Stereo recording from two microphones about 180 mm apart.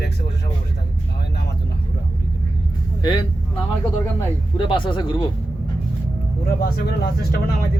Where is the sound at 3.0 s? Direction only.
25° left (ahead or behind).